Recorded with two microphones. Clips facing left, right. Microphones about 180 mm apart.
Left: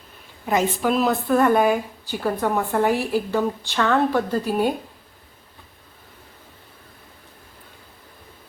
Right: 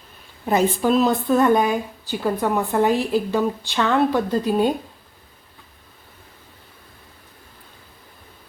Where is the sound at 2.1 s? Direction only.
15° right (ahead or behind).